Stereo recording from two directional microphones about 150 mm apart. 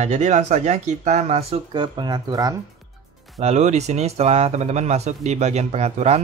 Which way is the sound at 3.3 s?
45° right (ahead or behind).